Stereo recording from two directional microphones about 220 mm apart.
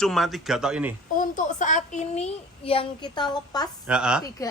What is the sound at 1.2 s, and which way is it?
A child's voice, 35° left (ahead or behind).